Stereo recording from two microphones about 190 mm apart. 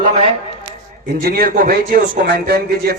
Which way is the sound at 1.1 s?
50° right (ahead or behind).